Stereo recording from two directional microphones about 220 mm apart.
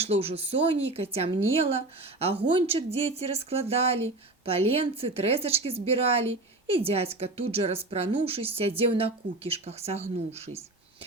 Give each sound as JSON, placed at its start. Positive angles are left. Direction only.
{"t": 0.0, "sound": "a woman's voice", "side_deg": -25}